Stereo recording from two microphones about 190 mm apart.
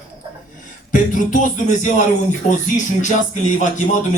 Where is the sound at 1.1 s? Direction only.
40° left (ahead or behind).